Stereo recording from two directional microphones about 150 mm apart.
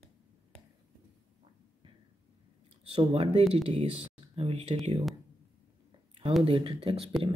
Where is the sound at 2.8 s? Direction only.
40° right (ahead or behind).